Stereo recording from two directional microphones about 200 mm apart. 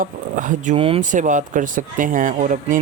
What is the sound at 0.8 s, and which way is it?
Speech, 30° right (ahead or behind).